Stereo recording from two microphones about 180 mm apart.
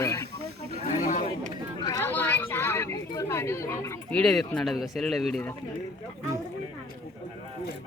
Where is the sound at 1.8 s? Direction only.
15° left (ahead or behind).